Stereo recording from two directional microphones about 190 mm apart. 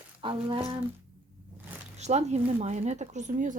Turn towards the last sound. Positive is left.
turn(degrees=-40)  # may be behind; listen again after turning